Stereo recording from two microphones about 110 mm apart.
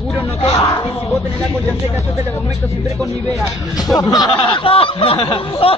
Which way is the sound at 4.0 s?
35° left (ahead or behind).